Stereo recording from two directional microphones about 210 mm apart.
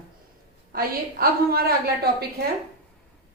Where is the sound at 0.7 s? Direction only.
45° right (ahead or behind).